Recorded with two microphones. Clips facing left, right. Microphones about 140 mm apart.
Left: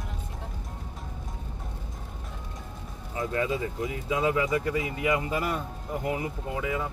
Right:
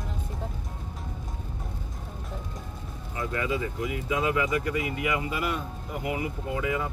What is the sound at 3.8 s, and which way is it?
Speech, 25° left (ahead or behind).